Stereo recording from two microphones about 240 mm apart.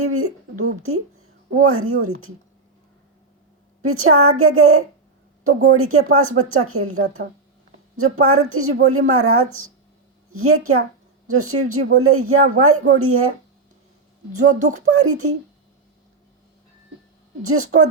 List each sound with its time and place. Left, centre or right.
0.0 s speech: right
3.8 s speech: right
14.3 s speech: right
14.9 s speech: right
17.4 s speech: right